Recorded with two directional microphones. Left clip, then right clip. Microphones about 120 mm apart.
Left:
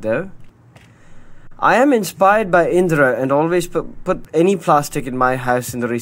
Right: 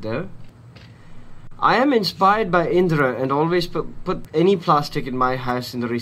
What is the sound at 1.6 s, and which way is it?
Speech, 50° left (ahead or behind).